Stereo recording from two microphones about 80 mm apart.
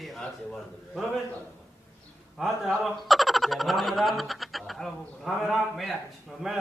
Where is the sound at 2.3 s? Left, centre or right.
Centre.